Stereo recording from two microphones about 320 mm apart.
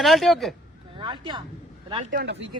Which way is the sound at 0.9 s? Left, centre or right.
Centre.